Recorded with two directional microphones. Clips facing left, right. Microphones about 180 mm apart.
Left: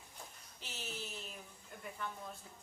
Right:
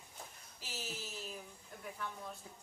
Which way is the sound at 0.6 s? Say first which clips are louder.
Right 1 dB; 5° right (ahead or behind).